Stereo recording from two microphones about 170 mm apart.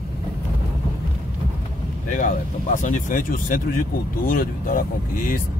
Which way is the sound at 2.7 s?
50° left (ahead or behind).